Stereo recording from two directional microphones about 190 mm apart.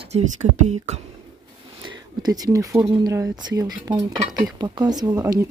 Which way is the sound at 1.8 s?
20° right (ahead or behind).